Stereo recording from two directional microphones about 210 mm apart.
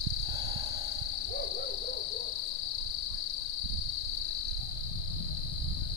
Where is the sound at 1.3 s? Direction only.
50° left (ahead or behind).